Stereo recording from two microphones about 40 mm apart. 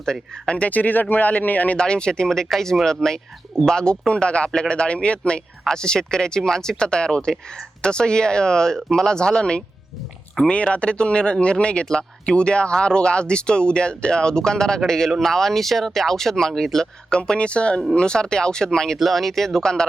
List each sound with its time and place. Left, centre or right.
0.0 s speech: centre
0.5 s a man's voice: left
1.8 s speech: left
18.9 s speech: centre